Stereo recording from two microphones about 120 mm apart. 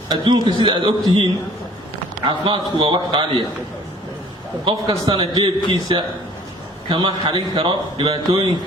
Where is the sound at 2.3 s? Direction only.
45° right (ahead or behind).